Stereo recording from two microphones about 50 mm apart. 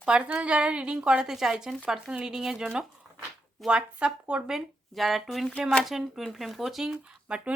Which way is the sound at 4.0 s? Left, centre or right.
Right.